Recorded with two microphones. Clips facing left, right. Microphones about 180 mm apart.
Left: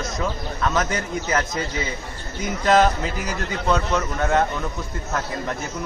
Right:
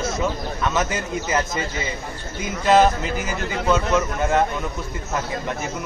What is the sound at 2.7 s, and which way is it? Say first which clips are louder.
A man's voice: right 2 dB; 5° right (ahead or behind).